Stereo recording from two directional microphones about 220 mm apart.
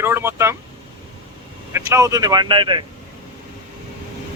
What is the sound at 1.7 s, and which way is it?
Speech, 10° right (ahead or behind).